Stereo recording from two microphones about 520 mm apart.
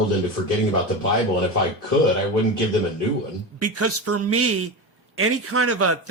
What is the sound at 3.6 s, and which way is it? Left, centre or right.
Speech, right.